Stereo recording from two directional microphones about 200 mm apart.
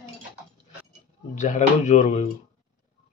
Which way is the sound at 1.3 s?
35° left (ahead or behind).